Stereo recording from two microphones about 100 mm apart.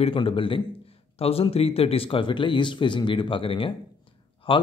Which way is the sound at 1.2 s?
80° left.